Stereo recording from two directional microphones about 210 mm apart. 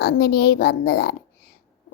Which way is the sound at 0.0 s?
50° left (ahead or behind).